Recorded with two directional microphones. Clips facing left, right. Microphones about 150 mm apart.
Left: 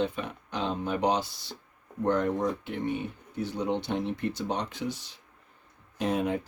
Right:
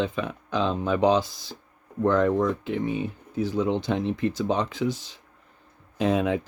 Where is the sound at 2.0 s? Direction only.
90° right.